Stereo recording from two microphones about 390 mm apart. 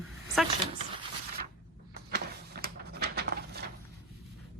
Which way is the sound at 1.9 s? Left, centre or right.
Right.